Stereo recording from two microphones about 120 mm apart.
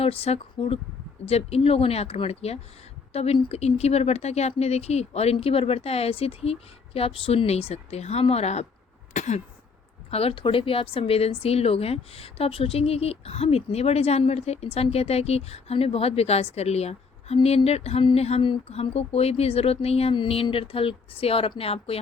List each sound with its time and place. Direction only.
0.0 s speech: 55° left (ahead or behind)
9.1 s throat clearing: 90° left
10.1 s speech: 55° left (ahead or behind)